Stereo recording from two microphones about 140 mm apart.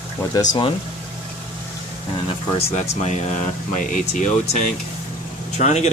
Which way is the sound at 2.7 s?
55° left (ahead or behind).